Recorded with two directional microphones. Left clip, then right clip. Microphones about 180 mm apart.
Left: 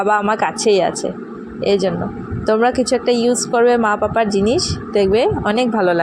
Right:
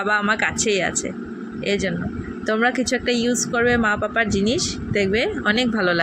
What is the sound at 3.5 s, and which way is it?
Speech, 5° right (ahead or behind).